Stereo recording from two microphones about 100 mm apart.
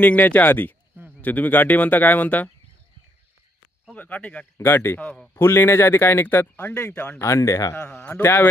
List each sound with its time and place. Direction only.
0.0 s speech: 15° left (ahead or behind)
3.9 s speech: 15° left (ahead or behind); by 7.7 s 35° left (ahead or behind)
7.7 s speech: 25° left (ahead or behind)